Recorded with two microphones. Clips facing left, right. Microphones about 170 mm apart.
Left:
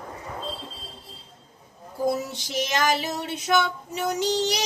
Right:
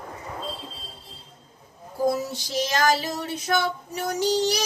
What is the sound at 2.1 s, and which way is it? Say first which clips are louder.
Female singing: right 1 dB; 20° left (ahead or behind).